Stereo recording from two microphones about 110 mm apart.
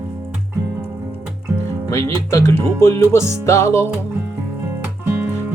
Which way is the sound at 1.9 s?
25° left (ahead or behind).